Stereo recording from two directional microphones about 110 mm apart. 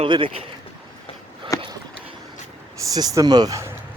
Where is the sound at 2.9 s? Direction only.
35° right (ahead or behind).